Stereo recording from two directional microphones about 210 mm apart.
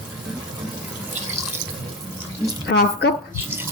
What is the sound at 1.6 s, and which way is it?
Water tap, 20° right (ahead or behind).